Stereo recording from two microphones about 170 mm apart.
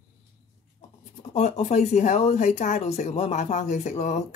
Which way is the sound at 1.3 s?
40° left (ahead or behind).